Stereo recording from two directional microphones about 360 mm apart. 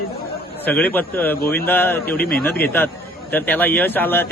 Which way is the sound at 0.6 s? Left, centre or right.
Centre.